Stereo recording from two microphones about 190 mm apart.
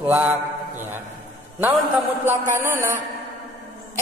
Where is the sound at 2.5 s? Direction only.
15° right (ahead or behind).